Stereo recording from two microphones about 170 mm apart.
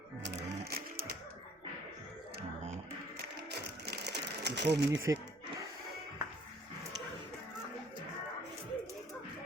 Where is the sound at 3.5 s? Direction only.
75° right (ahead or behind).